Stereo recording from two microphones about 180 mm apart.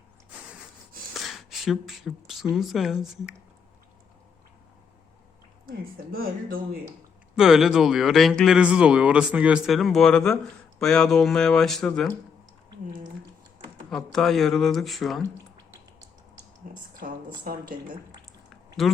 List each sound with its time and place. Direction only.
1.1 s speech: centre (ahead or behind)
5.6 s speech: 55° right (ahead or behind)
7.3 s speech: 5° right (ahead or behind)
13.9 s speech: centre (ahead or behind)
16.7 s a woman's voice: 50° right (ahead or behind)